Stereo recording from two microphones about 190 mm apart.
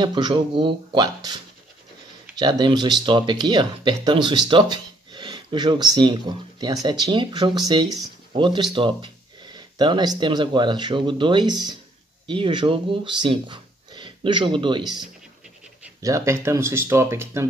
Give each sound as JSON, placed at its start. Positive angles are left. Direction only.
{"t": 0.0, "sound": "speech", "side_deg": -25}
{"t": 16.0, "sound": "speech", "side_deg": -15}